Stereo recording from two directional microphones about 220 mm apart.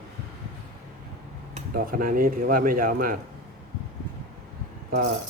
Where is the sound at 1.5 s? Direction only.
40° right (ahead or behind).